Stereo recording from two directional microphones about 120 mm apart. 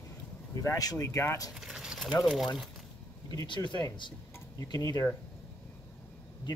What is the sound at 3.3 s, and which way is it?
Speech, 35° left (ahead or behind).